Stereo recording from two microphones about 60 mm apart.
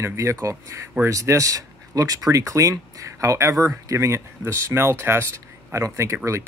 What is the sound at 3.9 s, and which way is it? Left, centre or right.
Speech, right.